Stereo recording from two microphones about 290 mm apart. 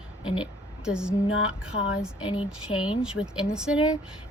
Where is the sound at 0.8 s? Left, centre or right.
Centre.